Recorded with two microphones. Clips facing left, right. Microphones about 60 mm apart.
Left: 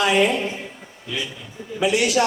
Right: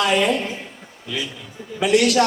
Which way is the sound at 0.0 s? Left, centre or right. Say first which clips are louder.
Even; right.